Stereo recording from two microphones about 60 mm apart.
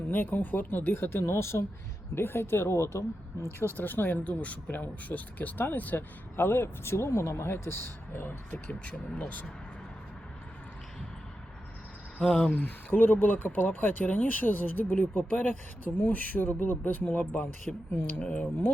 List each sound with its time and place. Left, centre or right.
0.1 s speech: left
3.8 s speech: left
4.2 s speech: left
12.2 s speech: centre
12.5 s speech: left
18.2 s speech: centre